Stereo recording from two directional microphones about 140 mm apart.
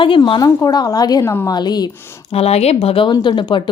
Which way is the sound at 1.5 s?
30° left (ahead or behind).